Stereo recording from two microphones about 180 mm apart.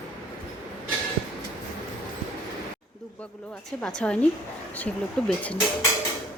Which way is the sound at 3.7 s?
5° left (ahead or behind).